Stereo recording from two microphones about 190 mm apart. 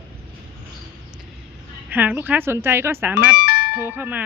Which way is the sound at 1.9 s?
10° right (ahead or behind).